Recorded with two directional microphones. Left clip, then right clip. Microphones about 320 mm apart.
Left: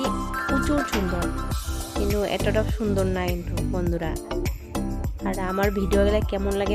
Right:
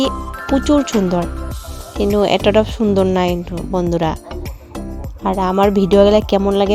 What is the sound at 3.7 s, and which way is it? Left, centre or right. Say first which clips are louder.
Music: right 12 dB; centre.